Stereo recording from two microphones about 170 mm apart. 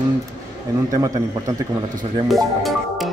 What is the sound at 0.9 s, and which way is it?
Speech, 20° right (ahead or behind).